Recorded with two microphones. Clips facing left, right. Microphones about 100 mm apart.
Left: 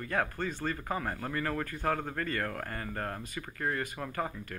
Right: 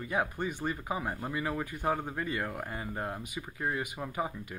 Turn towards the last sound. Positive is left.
turn(degrees=-15)  # may be behind; listen again after turning